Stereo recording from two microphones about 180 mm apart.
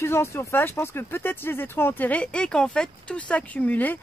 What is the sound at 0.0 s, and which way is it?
Speech, 15° left (ahead or behind).